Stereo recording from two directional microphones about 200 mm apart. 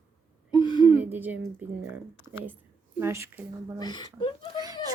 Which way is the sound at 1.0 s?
10° right (ahead or behind).